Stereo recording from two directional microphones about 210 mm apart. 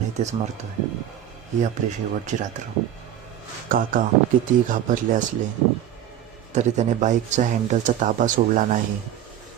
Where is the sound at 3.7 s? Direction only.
40° right (ahead or behind).